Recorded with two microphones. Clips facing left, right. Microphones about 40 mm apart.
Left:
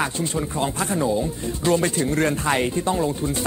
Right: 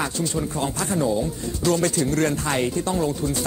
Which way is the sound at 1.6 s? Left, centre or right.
Left.